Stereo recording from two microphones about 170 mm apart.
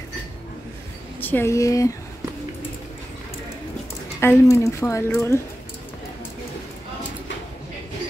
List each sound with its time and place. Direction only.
1.2 s a woman's voice: 15° left (ahead or behind)
4.2 s a woman's voice: 15° left (ahead or behind)